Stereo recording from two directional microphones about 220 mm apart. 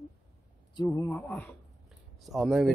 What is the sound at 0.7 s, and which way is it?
A man's voice, 15° left (ahead or behind).